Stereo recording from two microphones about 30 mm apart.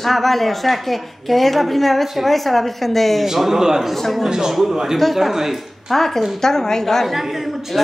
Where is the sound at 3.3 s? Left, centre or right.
Centre.